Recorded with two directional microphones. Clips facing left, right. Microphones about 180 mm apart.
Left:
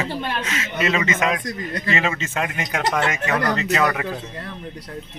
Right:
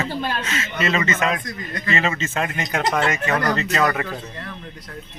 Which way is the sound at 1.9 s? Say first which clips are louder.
Right 2 dB; 10° left (ahead or behind).